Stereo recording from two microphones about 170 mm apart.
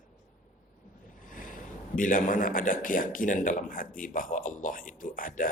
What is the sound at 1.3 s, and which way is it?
A man's voice, 50° left (ahead or behind).